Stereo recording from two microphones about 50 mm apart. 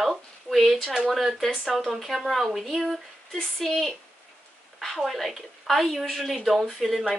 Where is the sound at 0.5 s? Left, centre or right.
Centre.